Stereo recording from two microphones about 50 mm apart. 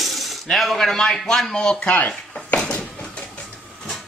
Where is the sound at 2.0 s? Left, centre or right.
Left.